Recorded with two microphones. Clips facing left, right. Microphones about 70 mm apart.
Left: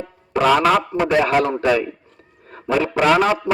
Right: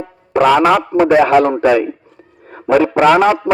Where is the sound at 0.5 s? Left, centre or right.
Right.